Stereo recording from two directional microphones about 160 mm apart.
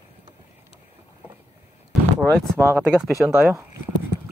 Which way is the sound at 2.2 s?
10° left (ahead or behind).